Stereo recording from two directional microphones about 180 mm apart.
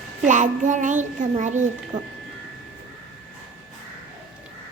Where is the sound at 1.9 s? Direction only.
20° right (ahead or behind).